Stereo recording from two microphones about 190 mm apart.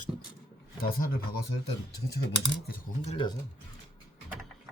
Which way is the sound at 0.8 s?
50° left (ahead or behind).